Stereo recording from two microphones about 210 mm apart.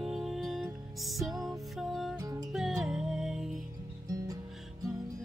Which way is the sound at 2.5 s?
Centre (ahead or behind).